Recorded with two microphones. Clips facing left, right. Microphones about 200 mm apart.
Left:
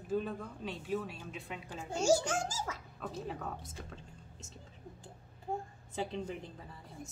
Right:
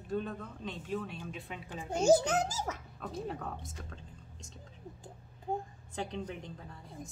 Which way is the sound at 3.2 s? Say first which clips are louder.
Right 1 dB; centre (ahead or behind).